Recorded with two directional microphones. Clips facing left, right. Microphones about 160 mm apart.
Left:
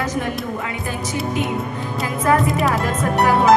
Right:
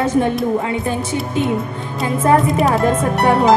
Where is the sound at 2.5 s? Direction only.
Centre (ahead or behind).